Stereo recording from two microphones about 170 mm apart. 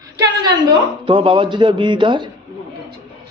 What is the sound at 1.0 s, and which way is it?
Speech, 30° right (ahead or behind).